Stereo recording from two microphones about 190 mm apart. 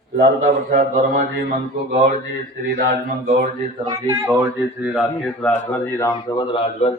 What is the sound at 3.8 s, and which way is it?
Speech, 20° right (ahead or behind).